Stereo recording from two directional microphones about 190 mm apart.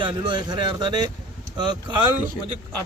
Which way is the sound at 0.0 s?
25° right (ahead or behind).